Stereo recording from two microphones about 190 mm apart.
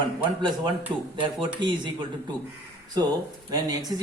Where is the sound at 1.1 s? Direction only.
25° right (ahead or behind).